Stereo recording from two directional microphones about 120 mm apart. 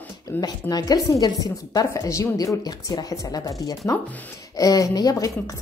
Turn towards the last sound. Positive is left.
turn(degrees=30)  # may be behind; listen again after turning